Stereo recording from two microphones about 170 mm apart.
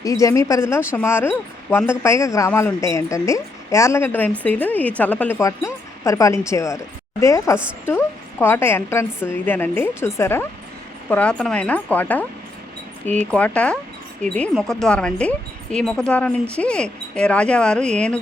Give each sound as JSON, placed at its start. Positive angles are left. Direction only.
{"t": 0.0, "sound": "a woman's voice", "side_deg": 20}
{"t": 13.3, "sound": "a woman's voice", "side_deg": 10}